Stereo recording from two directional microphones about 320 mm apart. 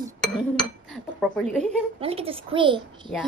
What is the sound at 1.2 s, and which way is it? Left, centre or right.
Speech, centre.